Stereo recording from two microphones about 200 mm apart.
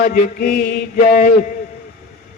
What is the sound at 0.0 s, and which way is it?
A man's voice, 50° left (ahead or behind).